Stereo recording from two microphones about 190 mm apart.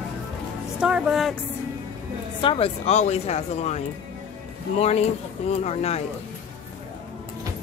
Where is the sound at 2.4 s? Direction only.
30° left (ahead or behind).